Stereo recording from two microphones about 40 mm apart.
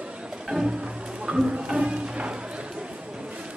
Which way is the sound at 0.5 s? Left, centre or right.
Centre.